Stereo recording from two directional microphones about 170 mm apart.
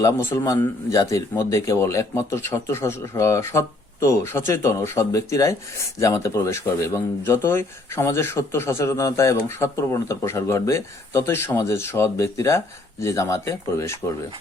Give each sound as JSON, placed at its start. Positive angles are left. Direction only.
{"t": 0.0, "sound": "a man's voice", "side_deg": 15}